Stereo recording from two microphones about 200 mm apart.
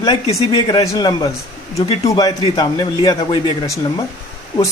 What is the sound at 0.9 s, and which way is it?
A man's voice, 20° left (ahead or behind).